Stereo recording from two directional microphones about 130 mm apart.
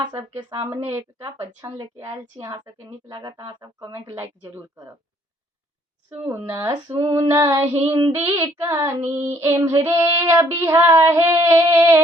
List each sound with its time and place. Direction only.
0.3 s speech: 35° right (ahead or behind)
0.7 s female singing: 20° right (ahead or behind)
3.1 s speech: 35° right (ahead or behind)
4.1 s female singing: 20° right (ahead or behind)
6.1 s a woman's voice: 15° right (ahead or behind)
6.7 s female singing: 25° right (ahead or behind)
7.9 s speech: 40° right (ahead or behind)
8.1 s female singing: 20° right (ahead or behind)